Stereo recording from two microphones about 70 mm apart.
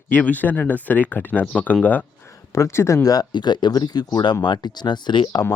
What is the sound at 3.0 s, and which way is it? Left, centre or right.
Speech, left.